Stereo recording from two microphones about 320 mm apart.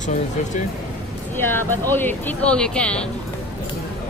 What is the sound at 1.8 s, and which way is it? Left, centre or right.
Speech, centre.